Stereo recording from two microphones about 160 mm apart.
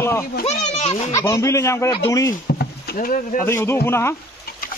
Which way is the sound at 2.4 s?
75° left (ahead or behind).